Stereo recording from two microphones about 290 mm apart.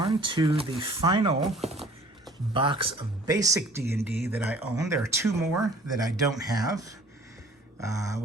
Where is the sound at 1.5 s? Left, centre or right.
Centre.